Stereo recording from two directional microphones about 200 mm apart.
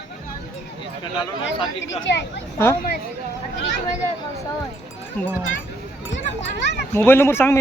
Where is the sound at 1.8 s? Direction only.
65° left (ahead or behind).